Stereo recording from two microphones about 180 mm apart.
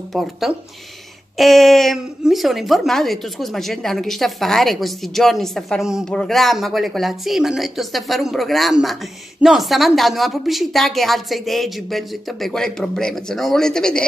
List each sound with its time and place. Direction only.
0.1 s speech: centre (ahead or behind)